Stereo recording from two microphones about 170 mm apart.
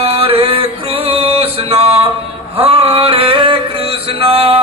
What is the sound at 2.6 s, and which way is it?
Male singing, 35° right (ahead or behind).